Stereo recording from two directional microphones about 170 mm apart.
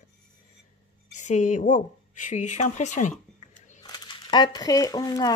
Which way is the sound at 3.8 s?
25° left (ahead or behind).